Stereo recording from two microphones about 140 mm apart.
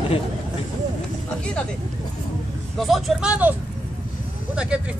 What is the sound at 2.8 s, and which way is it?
Speech, centre (ahead or behind).